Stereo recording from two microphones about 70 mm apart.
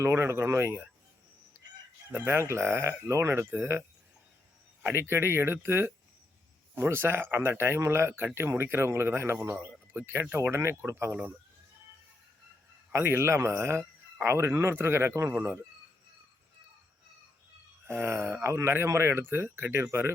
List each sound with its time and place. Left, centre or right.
0.0 s a man's voice: right
1.5 s crowing: right
2.1 s a man's voice: right
12.9 s a man's voice: right
17.8 s a man's voice: right